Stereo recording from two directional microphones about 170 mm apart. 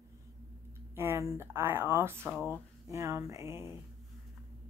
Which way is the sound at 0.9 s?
15° right (ahead or behind).